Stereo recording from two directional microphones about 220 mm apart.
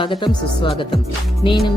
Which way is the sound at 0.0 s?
20° left (ahead or behind).